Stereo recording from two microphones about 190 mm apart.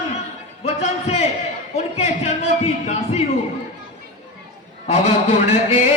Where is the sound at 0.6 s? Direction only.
35° left (ahead or behind).